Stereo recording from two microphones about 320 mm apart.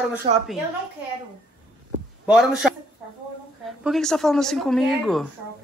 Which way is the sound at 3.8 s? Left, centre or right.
Centre.